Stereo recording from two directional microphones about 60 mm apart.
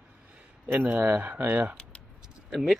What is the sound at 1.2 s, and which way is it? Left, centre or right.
Speech, right.